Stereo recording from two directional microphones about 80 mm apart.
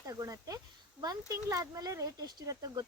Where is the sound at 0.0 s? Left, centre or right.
Right.